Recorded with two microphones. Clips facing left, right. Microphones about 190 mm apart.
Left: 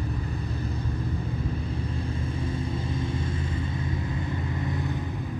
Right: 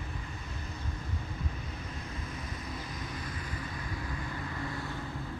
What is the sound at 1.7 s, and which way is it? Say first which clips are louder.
Vehicle: left 10 dB; 30° left (ahead or behind).